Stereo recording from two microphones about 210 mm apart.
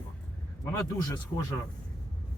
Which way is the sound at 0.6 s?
15° left (ahead or behind).